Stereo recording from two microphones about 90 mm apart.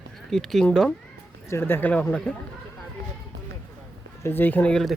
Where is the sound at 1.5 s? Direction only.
25° left (ahead or behind); by 2.3 s 10° left (ahead or behind).